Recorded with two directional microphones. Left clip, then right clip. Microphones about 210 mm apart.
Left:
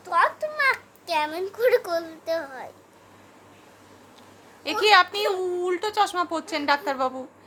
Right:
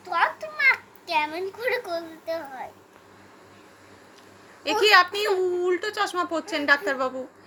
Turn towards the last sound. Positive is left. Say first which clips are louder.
# right 1 dB
turn(degrees=0)  # may be behind; listen again after turning